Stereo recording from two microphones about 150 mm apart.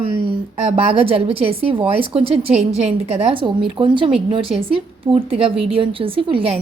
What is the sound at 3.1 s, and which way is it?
A woman's voice, 35° right (ahead or behind).